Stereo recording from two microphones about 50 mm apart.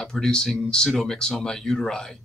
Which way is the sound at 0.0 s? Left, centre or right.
Centre.